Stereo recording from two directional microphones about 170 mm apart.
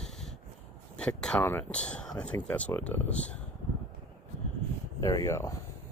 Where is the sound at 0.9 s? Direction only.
5° left (ahead or behind).